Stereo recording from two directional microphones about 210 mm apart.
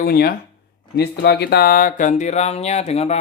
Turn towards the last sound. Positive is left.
turn(degrees=30)  # may be behind; listen again after turning